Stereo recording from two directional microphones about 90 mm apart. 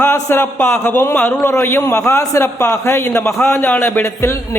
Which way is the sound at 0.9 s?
25° left (ahead or behind).